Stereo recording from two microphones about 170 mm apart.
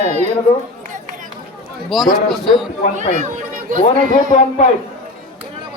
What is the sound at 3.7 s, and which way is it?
Speech, 50° right (ahead or behind).